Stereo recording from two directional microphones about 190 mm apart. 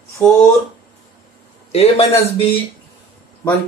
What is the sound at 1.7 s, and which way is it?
Speech, 35° left (ahead or behind).